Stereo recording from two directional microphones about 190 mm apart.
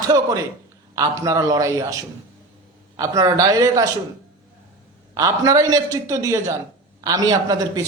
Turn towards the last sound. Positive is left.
turn(degrees=-20)  # may be behind; listen again after turning